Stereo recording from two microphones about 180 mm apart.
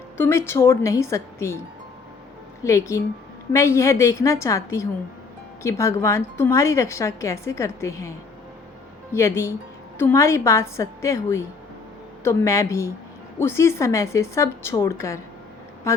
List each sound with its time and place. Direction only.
0.2 s a woman's voice: 15° left (ahead or behind)
2.6 s a woman's voice: 15° left (ahead or behind)
9.1 s a woman's voice: 15° left (ahead or behind)